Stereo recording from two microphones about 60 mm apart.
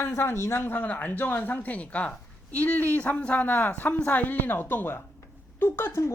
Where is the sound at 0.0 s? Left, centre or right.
Left.